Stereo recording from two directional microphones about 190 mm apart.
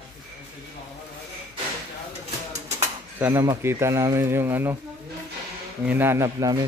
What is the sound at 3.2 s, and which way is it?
Speech, 15° right (ahead or behind).